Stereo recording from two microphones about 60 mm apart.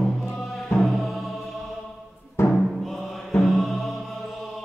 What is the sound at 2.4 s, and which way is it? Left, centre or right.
Timpani, left.